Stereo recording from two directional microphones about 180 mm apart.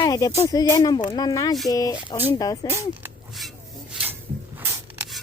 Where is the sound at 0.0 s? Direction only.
20° left (ahead or behind).